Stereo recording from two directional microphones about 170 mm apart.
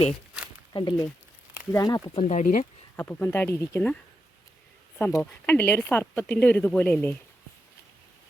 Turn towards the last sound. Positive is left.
turn(degrees=10)  # may be behind; listen again after turning